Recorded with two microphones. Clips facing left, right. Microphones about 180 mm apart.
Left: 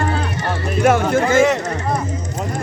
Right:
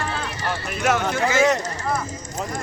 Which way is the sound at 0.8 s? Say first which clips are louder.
Left 6 dB; 50° left (ahead or behind).